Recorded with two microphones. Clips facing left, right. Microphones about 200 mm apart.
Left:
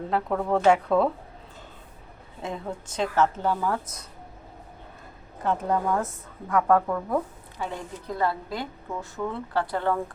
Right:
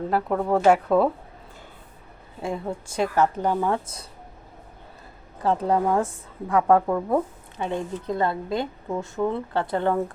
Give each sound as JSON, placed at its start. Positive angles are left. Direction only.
{"t": 0.1, "sound": "a woman's voice", "side_deg": -10}
{"t": 2.4, "sound": "a woman's voice", "side_deg": -10}
{"t": 5.4, "sound": "speech", "side_deg": -30}